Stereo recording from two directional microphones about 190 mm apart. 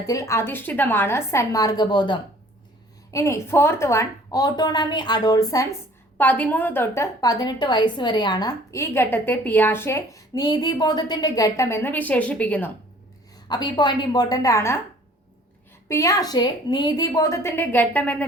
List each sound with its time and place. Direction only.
0.0 s a woman's voice: 15° left (ahead or behind)
13.5 s a woman's voice: 25° left (ahead or behind)
15.9 s a woman's voice: 15° left (ahead or behind)